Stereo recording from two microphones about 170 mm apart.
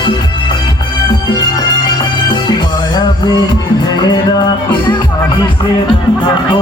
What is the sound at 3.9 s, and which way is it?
Music, 25° left (ahead or behind).